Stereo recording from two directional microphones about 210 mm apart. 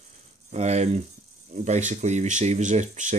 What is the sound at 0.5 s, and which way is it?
Speech, 35° right (ahead or behind).